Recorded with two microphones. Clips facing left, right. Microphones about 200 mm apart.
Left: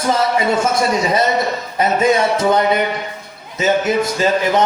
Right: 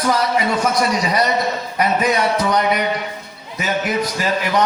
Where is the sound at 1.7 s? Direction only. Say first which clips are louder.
Left 4 dB; 25° left (ahead or behind).